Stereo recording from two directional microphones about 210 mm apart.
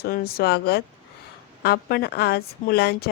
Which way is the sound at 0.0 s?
45° left (ahead or behind).